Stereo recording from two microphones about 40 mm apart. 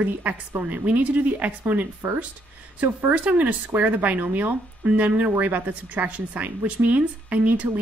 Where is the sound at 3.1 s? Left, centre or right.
Right.